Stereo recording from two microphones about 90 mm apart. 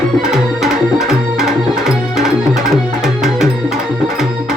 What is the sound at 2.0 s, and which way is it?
Music, centre (ahead or behind).